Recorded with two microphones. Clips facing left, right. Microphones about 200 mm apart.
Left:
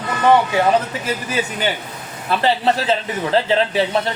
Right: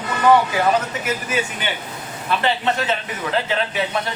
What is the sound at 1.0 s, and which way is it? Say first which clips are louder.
A man's voice: left 1 dB; 35° left (ahead or behind).